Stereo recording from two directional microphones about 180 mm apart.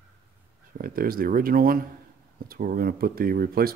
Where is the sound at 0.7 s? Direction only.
55° right (ahead or behind).